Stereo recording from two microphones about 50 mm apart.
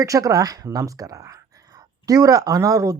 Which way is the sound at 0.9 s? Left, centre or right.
Right.